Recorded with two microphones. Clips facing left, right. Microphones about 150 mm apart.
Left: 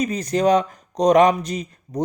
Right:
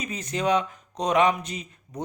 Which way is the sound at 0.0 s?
40° left (ahead or behind).